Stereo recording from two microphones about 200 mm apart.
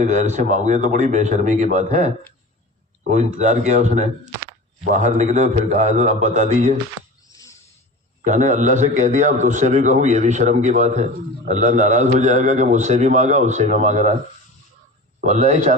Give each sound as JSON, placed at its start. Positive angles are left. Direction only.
{"t": 0.0, "sound": "a man's voice", "side_deg": -35}
{"t": 8.2, "sound": "a man's voice", "side_deg": -35}
{"t": 15.2, "sound": "a man's voice", "side_deg": -35}